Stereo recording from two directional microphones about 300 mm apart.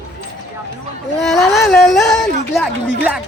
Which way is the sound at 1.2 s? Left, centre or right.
Centre.